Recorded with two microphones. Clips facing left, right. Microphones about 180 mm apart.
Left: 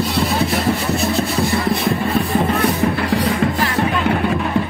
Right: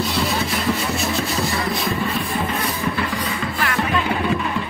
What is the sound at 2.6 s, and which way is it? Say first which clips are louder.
Music: left 6 dB; 65° left (ahead or behind).